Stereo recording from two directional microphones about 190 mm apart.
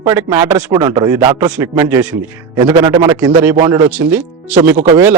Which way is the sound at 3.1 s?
10° right (ahead or behind).